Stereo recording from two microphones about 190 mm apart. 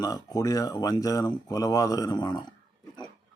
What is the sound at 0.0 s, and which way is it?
Speech, 20° left (ahead or behind).